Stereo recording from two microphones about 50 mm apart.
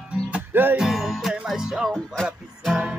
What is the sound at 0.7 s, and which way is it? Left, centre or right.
Music, centre.